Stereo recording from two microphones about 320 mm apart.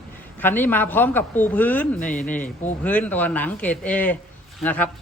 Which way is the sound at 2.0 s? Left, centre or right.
Left.